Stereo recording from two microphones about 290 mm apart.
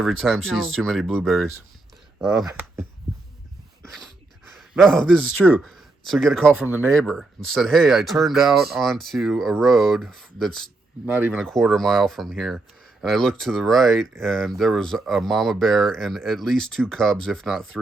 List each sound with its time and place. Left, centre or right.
0.0 s speech: centre
4.5 s speech: centre